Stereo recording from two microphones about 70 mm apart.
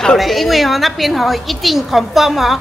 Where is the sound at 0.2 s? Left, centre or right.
Centre.